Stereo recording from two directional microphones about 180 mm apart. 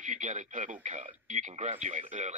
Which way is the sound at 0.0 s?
45° right (ahead or behind).